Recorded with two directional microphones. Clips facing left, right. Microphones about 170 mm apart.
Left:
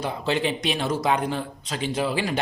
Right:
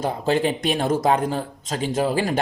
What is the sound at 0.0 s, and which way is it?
Speech, 45° right (ahead or behind).